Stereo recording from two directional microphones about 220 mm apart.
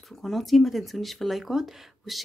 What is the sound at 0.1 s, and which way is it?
Speech, centre (ahead or behind).